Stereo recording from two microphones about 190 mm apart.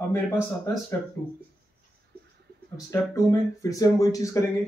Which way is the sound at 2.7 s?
20° left (ahead or behind).